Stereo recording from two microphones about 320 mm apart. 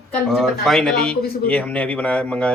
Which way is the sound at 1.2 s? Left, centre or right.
Left.